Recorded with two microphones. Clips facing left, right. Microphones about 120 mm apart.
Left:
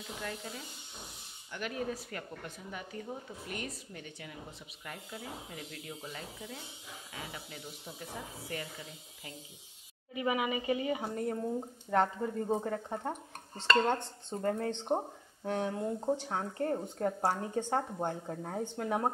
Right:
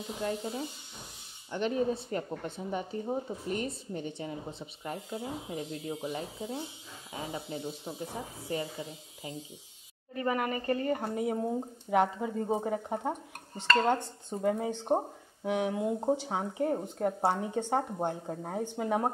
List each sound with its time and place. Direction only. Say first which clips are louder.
0.2 s speech: right 10 dB; 25° right (ahead or behind)
10.1 s speech: right 1 dB; 5° left (ahead or behind)